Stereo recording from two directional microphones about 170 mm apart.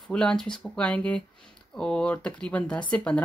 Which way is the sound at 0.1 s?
5° left (ahead or behind).